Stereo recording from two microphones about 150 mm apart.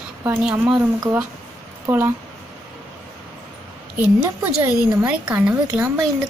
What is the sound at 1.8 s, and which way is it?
Speech, 15° right (ahead or behind).